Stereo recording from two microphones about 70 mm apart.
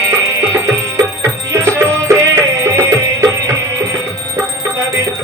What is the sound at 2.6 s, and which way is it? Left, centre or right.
Music, right.